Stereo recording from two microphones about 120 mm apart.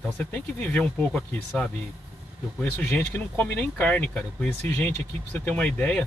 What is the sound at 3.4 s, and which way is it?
Speech, 10° left (ahead or behind).